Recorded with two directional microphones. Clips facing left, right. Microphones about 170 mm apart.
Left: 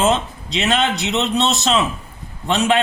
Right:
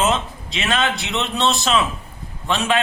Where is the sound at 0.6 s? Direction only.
25° left (ahead or behind).